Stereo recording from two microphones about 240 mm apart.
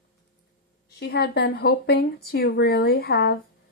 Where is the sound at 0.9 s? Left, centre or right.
Left.